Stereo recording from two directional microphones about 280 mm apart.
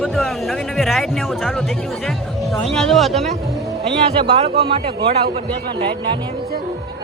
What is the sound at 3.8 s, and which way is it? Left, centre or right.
Speech, right.